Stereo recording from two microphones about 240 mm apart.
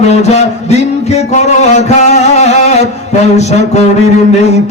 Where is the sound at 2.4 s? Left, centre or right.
Left.